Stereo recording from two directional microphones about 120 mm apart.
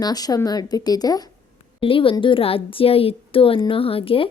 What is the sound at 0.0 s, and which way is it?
A woman's voice, 30° left (ahead or behind).